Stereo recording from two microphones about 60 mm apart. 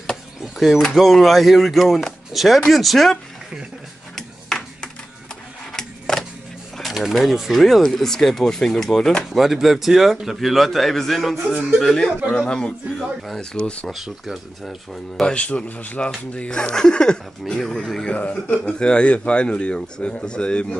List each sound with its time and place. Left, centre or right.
0.4 s speech: centre
4.1 s a sound: centre
5.7 s a sound: centre
6.8 s speech: centre
9.4 s speech: centre
14.0 s speech: centre
15.2 s speech: left
18.1 s speech: left
18.6 s speech: centre